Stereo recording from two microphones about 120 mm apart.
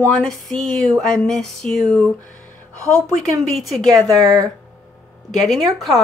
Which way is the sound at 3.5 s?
Centre (ahead or behind).